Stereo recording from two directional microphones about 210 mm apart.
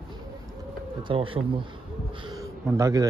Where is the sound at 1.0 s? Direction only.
25° right (ahead or behind).